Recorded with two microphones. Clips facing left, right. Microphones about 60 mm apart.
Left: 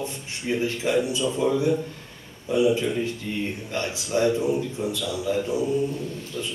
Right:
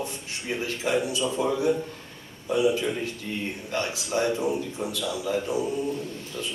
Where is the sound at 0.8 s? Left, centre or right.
Right.